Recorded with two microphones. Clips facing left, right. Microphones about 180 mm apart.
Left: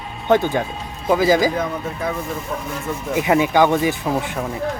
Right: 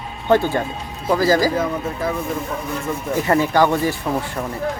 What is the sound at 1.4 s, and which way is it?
Speech, 5° right (ahead or behind).